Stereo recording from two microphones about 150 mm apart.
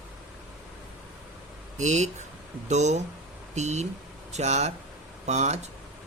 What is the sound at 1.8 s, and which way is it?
Speech, 50° right (ahead or behind).